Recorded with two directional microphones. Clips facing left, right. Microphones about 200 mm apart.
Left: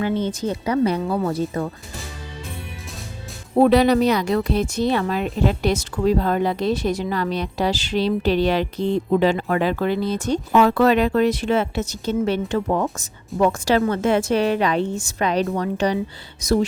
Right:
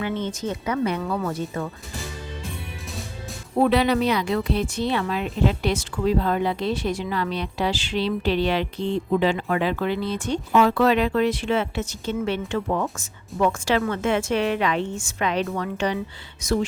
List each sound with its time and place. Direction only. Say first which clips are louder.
0.0 s speech: left 4 dB; 35° left (ahead or behind)
3.6 s speech: left 5 dB; 40° left (ahead or behind)